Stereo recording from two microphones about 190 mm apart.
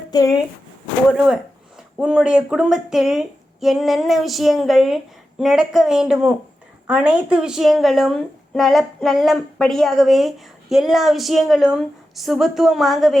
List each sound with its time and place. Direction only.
0.1 s speech: 20° left (ahead or behind)
2.0 s a woman's voice: 5° right (ahead or behind)